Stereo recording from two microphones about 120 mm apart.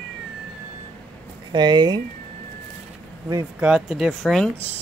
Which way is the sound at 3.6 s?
5° right (ahead or behind).